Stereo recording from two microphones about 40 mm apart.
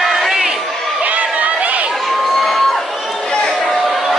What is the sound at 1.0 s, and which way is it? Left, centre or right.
Run, right.